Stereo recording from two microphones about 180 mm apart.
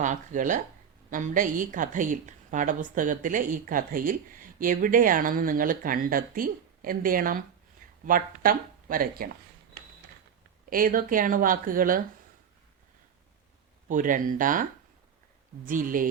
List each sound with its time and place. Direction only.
0.0 s a woman's voice: 45° right (ahead or behind)
10.7 s a woman's voice: 50° right (ahead or behind)
13.8 s a woman's voice: 45° right (ahead or behind)
15.6 s a woman's voice: 50° right (ahead or behind)